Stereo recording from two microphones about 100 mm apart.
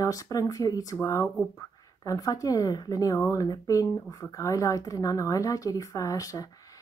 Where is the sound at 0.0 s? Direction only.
35° left (ahead or behind).